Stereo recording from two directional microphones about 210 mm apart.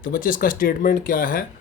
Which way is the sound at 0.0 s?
40° left (ahead or behind).